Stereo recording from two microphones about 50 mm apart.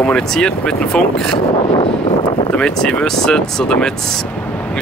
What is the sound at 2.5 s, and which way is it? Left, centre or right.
Speech, centre.